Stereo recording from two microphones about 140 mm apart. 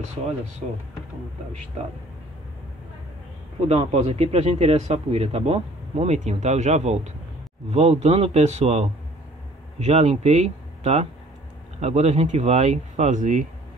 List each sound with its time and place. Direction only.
3.6 s speech: 50° right (ahead or behind)